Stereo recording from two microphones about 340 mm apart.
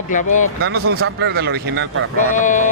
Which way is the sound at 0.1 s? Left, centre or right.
Left.